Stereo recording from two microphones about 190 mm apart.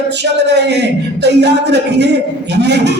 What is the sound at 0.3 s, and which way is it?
Speech, 65° right (ahead or behind).